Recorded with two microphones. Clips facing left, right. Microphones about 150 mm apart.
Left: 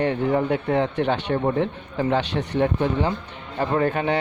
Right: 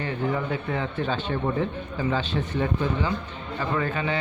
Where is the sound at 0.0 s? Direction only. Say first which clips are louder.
Left 6 dB; 60° left (ahead or behind).